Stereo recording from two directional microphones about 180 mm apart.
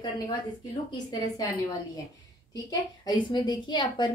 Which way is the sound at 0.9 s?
20° left (ahead or behind).